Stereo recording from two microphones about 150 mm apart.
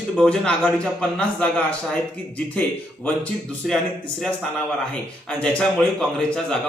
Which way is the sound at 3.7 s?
5° left (ahead or behind).